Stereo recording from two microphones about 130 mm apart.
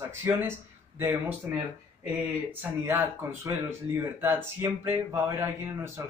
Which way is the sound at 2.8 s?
20° right (ahead or behind).